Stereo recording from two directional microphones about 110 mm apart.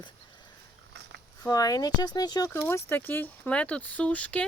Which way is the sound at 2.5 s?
20° left (ahead or behind).